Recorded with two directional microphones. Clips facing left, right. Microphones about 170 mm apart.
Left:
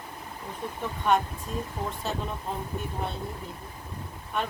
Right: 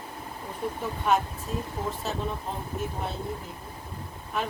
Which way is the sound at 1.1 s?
5° right (ahead or behind).